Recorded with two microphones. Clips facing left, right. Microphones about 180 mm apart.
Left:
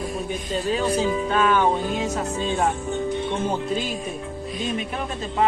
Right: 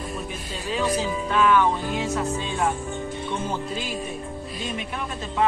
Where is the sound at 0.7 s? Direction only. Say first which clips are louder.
Left 2 dB; 40° left (ahead or behind).